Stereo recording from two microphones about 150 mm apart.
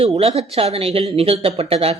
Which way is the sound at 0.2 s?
45° right (ahead or behind).